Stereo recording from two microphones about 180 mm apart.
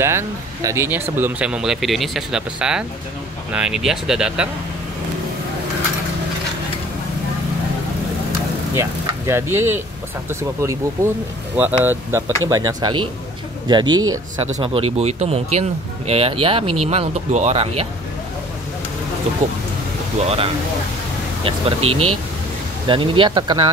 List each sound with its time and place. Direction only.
0.0 s speech: 15° right (ahead or behind)
8.7 s speech: 15° right (ahead or behind)
14.4 s speech: 30° right (ahead or behind)
20.2 s speech: 35° right (ahead or behind)
22.8 s speech: 30° right (ahead or behind)